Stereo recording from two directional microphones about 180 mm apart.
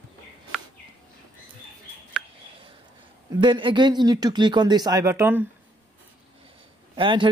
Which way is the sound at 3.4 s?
25° right (ahead or behind).